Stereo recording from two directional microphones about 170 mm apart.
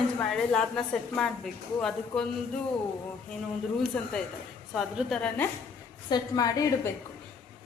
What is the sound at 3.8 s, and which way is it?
A woman's voice, 5° left (ahead or behind).